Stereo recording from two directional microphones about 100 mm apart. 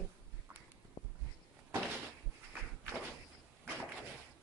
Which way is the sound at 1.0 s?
45° left (ahead or behind).